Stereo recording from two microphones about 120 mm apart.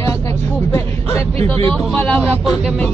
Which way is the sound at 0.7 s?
20° left (ahead or behind).